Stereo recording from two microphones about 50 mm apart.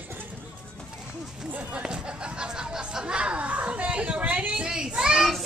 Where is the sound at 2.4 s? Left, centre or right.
Centre.